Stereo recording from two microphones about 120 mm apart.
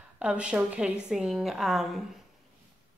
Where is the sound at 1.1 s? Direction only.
5° right (ahead or behind).